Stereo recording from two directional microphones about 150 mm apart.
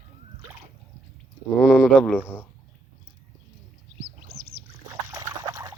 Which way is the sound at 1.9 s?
5° left (ahead or behind).